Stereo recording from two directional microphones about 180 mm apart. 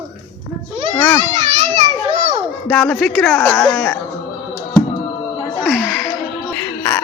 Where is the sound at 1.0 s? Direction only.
15° left (ahead or behind).